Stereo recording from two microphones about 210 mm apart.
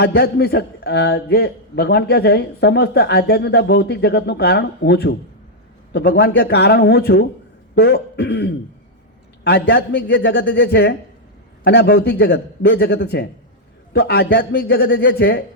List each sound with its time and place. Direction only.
0.0 s a man's voice: 50° left (ahead or behind)